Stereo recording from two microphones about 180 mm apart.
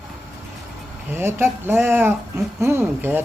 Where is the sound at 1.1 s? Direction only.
15° right (ahead or behind).